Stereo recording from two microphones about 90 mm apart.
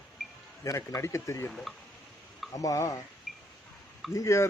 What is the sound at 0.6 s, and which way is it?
Speech, 35° left (ahead or behind).